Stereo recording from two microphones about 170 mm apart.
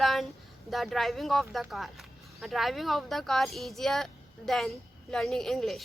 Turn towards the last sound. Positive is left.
turn(degrees=0)  # may be behind; listen again after turning